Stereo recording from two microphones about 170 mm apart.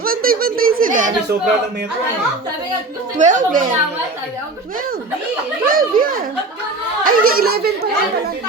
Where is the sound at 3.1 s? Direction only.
50° right (ahead or behind).